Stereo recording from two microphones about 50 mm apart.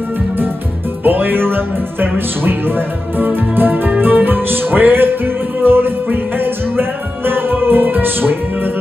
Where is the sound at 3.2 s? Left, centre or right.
Right.